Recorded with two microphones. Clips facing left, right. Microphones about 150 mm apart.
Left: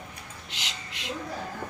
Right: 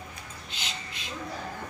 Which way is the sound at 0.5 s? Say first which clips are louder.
Right 1 dB; 80° left.